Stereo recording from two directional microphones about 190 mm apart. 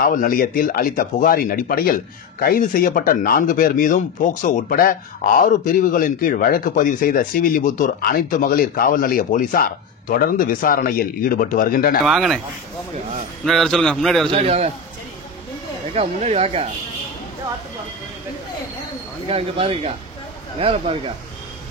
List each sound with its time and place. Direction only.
0.0 s speech: 50° left (ahead or behind)
12.1 s a man's voice: centre (ahead or behind)
13.5 s a man's voice: centre (ahead or behind)
14.3 s speech: 30° right (ahead or behind)
15.9 s speech: 35° right (ahead or behind)
19.2 s speech: 30° right (ahead or behind)